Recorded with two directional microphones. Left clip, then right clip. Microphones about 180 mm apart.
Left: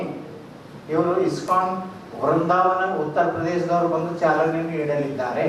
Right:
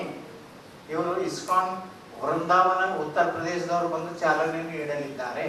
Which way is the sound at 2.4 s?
5° left (ahead or behind).